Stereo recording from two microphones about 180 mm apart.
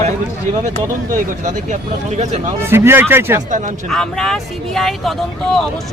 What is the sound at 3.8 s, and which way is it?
Speech, 5° left (ahead or behind).